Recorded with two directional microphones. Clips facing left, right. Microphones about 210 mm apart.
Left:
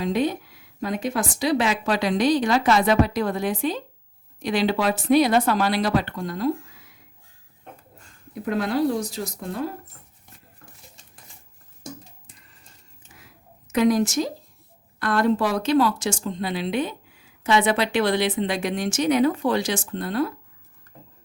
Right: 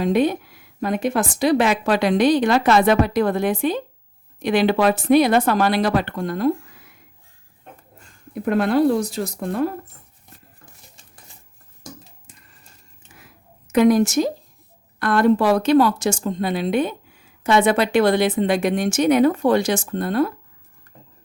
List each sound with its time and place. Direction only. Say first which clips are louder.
0.0 s speech: right 5 dB; 60° right (ahead or behind)
8.4 s speech: right 5 dB; 55° right (ahead or behind)
13.7 s speech: right 4 dB; 60° right (ahead or behind)